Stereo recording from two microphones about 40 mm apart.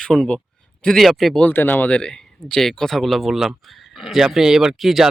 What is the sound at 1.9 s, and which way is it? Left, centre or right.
Speech, left.